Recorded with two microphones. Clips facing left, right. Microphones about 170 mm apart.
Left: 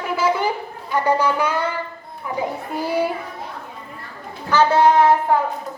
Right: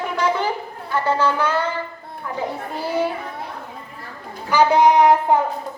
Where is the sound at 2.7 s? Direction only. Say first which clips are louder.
Left 1 dB; 10° left (ahead or behind).